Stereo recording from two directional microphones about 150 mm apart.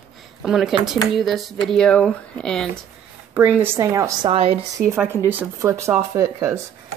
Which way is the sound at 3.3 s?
15° right (ahead or behind).